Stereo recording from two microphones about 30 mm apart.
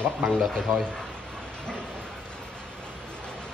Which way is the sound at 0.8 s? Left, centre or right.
Left.